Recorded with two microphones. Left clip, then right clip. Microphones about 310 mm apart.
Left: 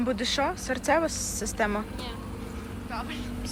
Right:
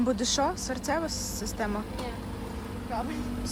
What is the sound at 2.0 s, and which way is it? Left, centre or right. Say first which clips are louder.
Vehicle: right 1 dB; right.